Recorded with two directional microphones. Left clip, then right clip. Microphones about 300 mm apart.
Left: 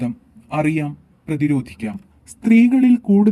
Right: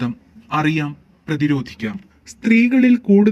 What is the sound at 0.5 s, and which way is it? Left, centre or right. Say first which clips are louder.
Speech: right 1 dB; right.